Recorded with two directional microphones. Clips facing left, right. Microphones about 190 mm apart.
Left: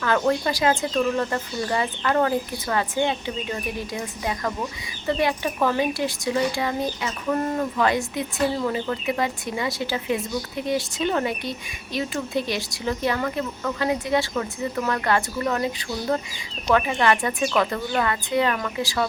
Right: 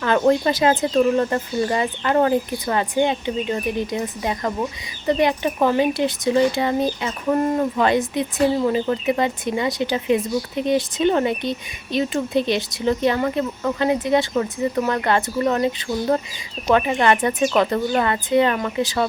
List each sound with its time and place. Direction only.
0.0 s speech: 25° right (ahead or behind)